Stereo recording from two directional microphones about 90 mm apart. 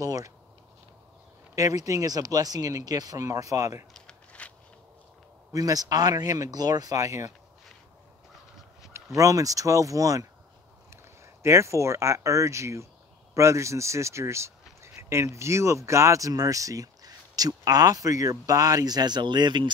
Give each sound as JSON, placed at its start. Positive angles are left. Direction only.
{"t": 0.0, "sound": "speech", "side_deg": -40}
{"t": 1.5, "sound": "speech", "side_deg": -40}
{"t": 3.9, "sound": "a sound", "side_deg": 10}
{"t": 5.5, "sound": "speech", "side_deg": -45}
{"t": 8.9, "sound": "speech", "side_deg": -35}
{"t": 11.4, "sound": "speech", "side_deg": -35}